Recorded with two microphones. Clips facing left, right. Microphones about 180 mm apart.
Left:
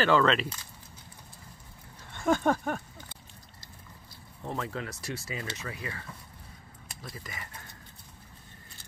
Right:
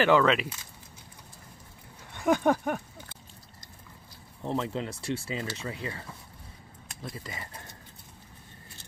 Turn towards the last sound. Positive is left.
turn(degrees=-30)  # may be behind; listen again after turning